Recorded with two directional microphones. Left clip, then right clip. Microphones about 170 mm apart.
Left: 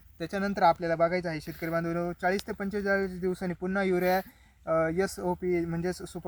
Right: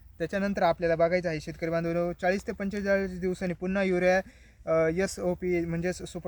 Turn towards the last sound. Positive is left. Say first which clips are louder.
# right 1 dB
turn(degrees=-40)  # may be behind; listen again after turning